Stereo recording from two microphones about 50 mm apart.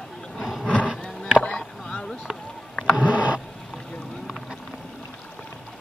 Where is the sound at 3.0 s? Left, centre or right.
Right.